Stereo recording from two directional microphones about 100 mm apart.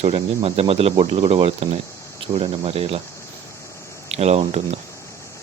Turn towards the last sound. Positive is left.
turn(degrees=-90)